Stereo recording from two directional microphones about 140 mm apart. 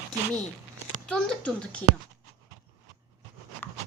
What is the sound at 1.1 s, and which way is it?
Speech, 5° left (ahead or behind).